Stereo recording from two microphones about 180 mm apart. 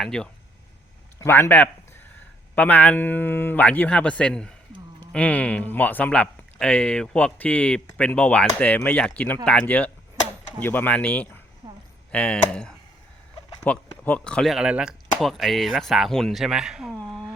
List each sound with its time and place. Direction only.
0.0 s speech: 5° left (ahead or behind)
11.6 s a sound: 25° right (ahead or behind)
12.1 s speech: 5° left (ahead or behind)